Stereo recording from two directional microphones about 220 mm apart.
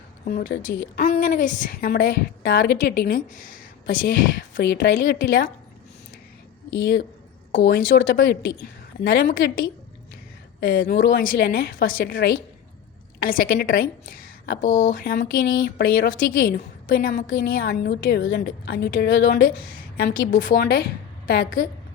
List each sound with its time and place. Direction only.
0.3 s a woman's voice: 40° left (ahead or behind)
7.6 s a woman's voice: 50° left (ahead or behind)